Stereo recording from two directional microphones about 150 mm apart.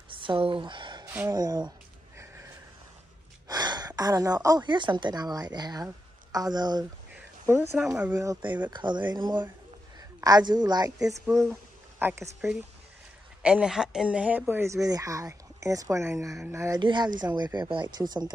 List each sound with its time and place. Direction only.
0.1 s a sound: 35° right (ahead or behind)
1.0 s a sound: 10° right (ahead or behind)
1.3 s speech: 25° right (ahead or behind)
3.4 s a woman's voice: 25° right (ahead or behind)
7.2 s a sound: 15° right (ahead or behind)
7.8 s speech: 5° right (ahead or behind)
8.1 s a woman's voice: 25° right (ahead or behind)
12.0 s speech: 10° right (ahead or behind)
16.8 s speech: 30° right (ahead or behind)